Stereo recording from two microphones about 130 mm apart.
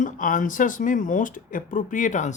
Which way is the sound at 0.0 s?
90° left.